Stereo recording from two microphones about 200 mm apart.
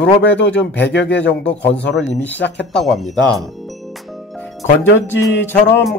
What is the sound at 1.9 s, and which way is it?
Speech, 10° left (ahead or behind).